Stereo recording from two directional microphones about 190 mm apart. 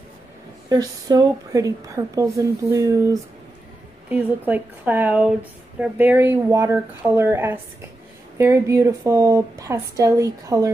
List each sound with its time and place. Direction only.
0.7 s a woman's voice: 20° right (ahead or behind)